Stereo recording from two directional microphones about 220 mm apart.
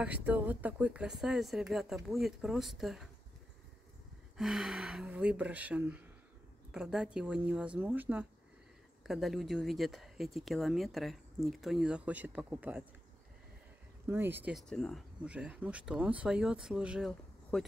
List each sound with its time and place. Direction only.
0.0 s speech: 5° right (ahead or behind)
4.4 s speech: centre (ahead or behind)
14.0 s speech: 10° right (ahead or behind)